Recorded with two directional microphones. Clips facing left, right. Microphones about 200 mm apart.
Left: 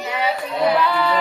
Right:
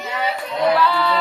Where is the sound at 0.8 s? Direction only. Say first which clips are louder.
Even; 15° left (ahead or behind).